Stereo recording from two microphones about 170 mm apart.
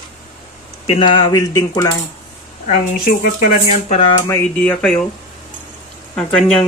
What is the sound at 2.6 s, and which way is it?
Speech, 50° left (ahead or behind).